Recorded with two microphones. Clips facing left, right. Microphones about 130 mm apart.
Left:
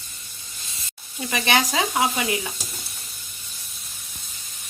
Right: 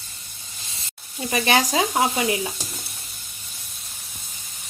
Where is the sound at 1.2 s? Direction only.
35° right (ahead or behind).